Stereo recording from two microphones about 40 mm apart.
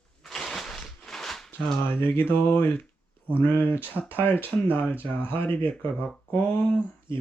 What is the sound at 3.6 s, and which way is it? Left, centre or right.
Speech, right.